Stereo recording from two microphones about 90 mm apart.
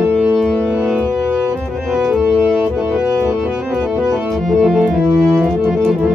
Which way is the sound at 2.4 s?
10° left (ahead or behind).